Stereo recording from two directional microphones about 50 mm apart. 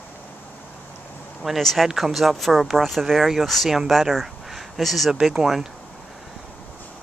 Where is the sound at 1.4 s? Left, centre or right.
Centre.